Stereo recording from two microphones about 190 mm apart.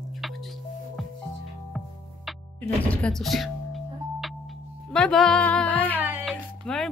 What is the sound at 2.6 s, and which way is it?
Music, 5° left (ahead or behind).